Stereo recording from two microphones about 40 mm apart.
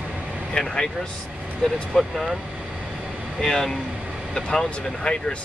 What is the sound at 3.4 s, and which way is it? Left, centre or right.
Speech, centre.